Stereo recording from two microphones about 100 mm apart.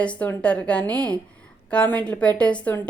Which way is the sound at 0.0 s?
10° left (ahead or behind).